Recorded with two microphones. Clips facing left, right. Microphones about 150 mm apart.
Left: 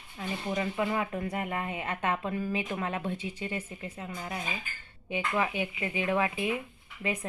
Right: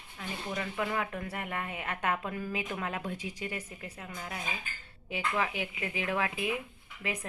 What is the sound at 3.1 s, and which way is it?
Speech, 10° right (ahead or behind).